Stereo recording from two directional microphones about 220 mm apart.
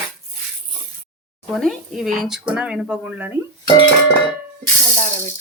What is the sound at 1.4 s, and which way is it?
Speech, centre (ahead or behind).